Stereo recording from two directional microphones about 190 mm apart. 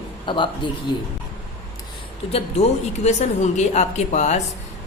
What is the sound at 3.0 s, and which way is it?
A woman's voice, 35° left (ahead or behind).